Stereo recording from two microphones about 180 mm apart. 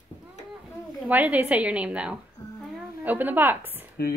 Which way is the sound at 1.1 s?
10° right (ahead or behind).